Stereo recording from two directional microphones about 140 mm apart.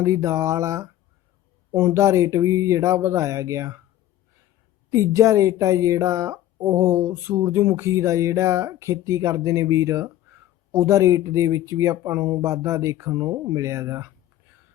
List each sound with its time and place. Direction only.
0.0 s speech: 20° right (ahead or behind)
1.9 s speech: 20° right (ahead or behind)
4.9 s speech: 20° right (ahead or behind)
12.4 s speech: 20° right (ahead or behind)